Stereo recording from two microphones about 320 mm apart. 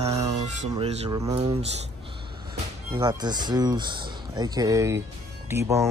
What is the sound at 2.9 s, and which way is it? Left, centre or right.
Speech, centre.